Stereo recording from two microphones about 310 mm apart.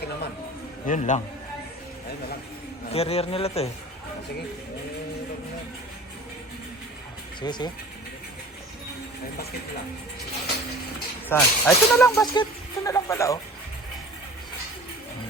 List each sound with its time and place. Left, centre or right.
0.9 s speech: left
2.9 s speech: centre
7.4 s speech: centre
11.3 s speech: centre